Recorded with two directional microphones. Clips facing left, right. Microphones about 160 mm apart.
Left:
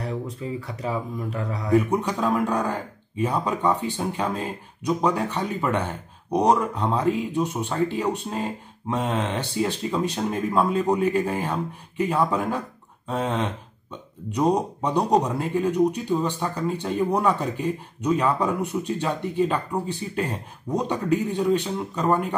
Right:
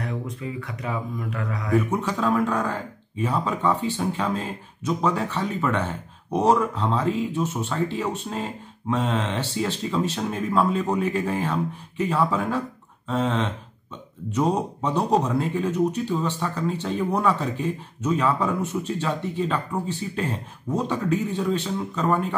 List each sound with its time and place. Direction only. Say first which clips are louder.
0.6 s speech: left 3 dB; 30° left (ahead or behind)
1.9 s speech: even; 15° left (ahead or behind)